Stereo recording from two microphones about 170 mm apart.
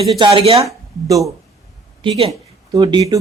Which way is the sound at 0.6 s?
20° right (ahead or behind).